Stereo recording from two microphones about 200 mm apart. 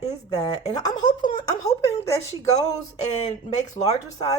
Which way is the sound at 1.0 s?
40° left (ahead or behind).